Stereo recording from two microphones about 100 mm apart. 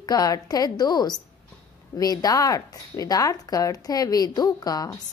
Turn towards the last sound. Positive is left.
turn(degrees=40)  # may be behind; listen again after turning